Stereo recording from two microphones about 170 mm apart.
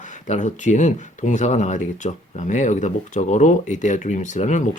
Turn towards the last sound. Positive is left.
turn(degrees=45)  # may be behind; listen again after turning